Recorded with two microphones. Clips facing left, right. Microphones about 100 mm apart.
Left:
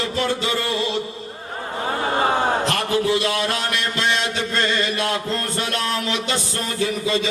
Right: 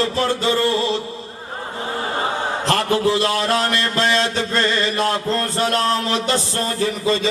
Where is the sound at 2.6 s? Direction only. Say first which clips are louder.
Right 3 dB; 35° right (ahead or behind).